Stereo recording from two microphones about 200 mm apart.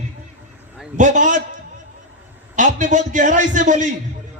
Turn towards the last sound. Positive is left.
turn(degrees=-40)  # may be behind; listen again after turning